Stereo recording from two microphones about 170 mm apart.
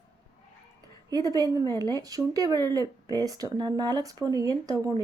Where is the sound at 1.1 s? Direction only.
20° right (ahead or behind).